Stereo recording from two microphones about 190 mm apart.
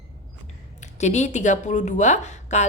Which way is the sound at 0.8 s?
35° left (ahead or behind).